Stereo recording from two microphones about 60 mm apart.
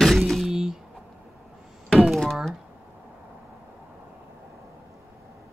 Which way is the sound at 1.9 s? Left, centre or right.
Centre.